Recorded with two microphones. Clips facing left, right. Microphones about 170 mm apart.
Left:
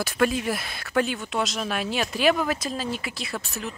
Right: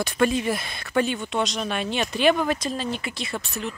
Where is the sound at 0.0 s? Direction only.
Centre (ahead or behind).